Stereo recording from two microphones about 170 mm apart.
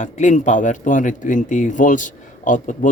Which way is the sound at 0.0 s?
45° left (ahead or behind).